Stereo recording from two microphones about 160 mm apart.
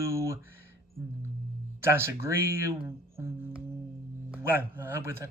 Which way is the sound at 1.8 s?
15° right (ahead or behind).